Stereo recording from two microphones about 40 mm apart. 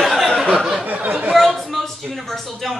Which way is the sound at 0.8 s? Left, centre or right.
Right.